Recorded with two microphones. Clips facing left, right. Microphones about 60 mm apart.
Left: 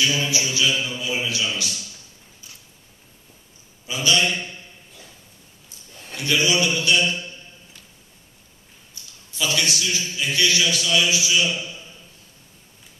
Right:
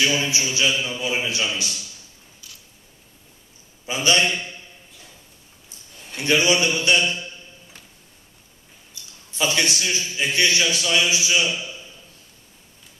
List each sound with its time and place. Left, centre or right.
0.0 s a man's voice: right
3.8 s a man's voice: right
6.1 s a man's voice: right
9.3 s a man's voice: right